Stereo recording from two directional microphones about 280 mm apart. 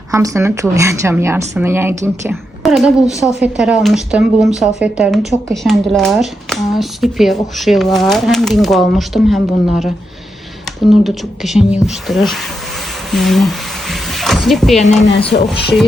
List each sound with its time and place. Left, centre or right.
0.1 s a woman's voice: centre
13.1 s a sound: centre
15.0 s speech: left